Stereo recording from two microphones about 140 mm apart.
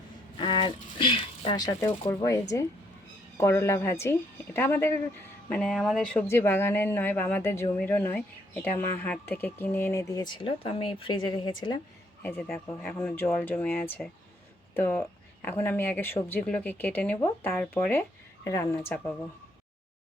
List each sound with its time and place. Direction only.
0.3 s a sound: 35° left (ahead or behind)
1.9 s speech: 20° left (ahead or behind)
5.5 s speech: 5° left (ahead or behind)
6.2 s speech: 15° left (ahead or behind); by 11.8 s 35° left (ahead or behind)
12.2 s speech: 15° left (ahead or behind)